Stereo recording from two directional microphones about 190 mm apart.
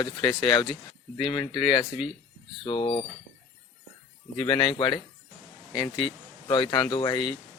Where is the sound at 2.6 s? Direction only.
30° left (ahead or behind).